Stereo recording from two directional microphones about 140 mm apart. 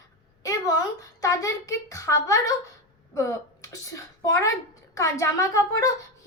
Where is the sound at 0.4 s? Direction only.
25° left (ahead or behind).